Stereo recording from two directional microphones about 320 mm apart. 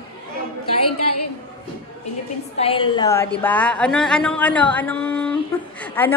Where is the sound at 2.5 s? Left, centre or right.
Centre.